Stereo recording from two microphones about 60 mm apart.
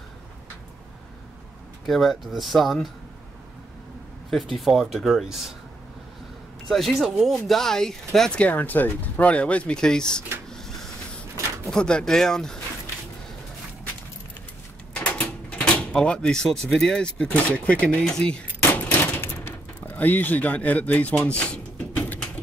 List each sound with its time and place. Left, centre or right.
1.9 s speech: centre
4.3 s speech: centre
6.7 s speech: centre
8.3 s speech: left
10.5 s printer: centre
11.6 s speech: centre
15.0 s speech: left
18.7 s gunshot: left
19.9 s speech: left